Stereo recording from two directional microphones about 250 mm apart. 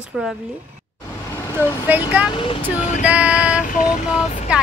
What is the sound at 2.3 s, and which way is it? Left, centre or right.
Speech, left.